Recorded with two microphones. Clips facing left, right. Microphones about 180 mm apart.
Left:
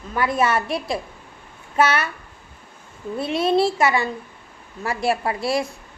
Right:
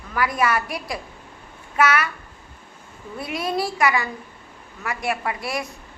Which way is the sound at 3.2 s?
25° left (ahead or behind).